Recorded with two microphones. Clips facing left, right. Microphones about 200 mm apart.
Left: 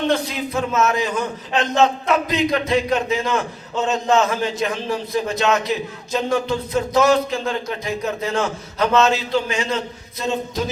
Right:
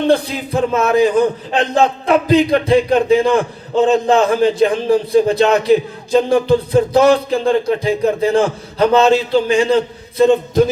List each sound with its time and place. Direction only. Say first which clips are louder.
0.1 s a man's voice: right 6 dB; 30° right (ahead or behind)
10.2 s a man's voice: right 12 dB; 55° right (ahead or behind)